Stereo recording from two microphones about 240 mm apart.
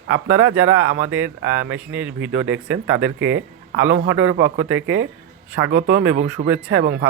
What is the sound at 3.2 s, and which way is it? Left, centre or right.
A man's voice, right.